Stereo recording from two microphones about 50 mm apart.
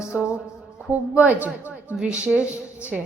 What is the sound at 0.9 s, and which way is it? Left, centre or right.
A woman's voice, right.